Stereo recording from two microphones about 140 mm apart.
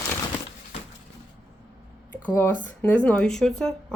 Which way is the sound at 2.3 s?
15° left (ahead or behind).